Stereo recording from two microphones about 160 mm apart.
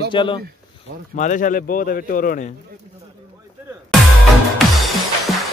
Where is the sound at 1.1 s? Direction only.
50° left (ahead or behind).